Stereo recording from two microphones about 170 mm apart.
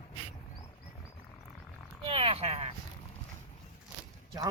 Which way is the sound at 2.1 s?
35° right (ahead or behind).